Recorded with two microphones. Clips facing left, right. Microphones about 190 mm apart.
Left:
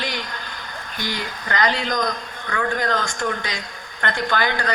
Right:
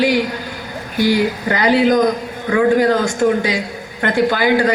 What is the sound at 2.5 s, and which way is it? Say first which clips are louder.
Speech: right 11 dB; 25° right (ahead or behind).